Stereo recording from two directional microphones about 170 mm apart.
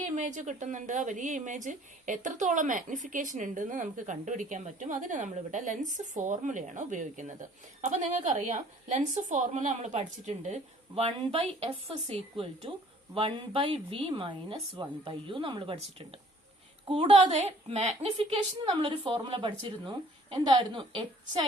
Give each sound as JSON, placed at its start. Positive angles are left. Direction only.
{"t": 0.0, "sound": "a woman's voice", "side_deg": -45}